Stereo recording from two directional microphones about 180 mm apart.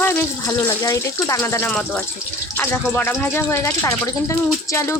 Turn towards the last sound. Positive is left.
turn(degrees=15)  # may be behind; listen again after turning